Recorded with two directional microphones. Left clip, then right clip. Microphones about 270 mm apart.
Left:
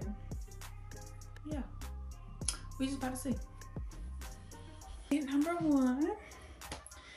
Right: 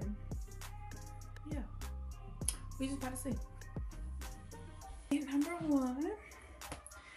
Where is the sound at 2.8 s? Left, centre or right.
Centre.